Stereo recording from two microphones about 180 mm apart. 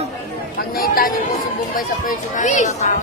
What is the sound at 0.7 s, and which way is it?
Speech, 55° left (ahead or behind).